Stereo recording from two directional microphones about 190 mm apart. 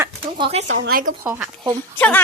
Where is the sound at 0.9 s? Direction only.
50° right (ahead or behind).